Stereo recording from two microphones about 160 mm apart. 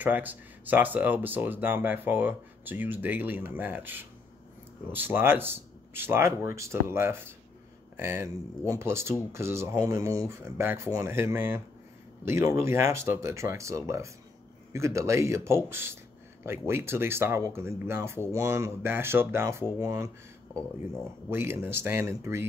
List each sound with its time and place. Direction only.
0.0 s speech: 10° right (ahead or behind)
21.3 s speech: 15° right (ahead or behind)